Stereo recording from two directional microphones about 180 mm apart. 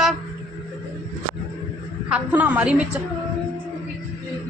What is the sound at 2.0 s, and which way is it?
Speech, 5° right (ahead or behind).